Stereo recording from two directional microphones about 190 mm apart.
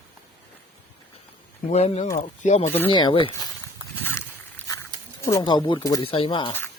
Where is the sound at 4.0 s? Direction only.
10° left (ahead or behind).